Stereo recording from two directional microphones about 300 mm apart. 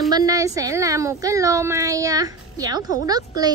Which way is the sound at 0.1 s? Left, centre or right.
Centre.